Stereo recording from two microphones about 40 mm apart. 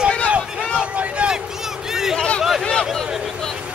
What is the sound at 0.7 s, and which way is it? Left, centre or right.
Vehicle, right.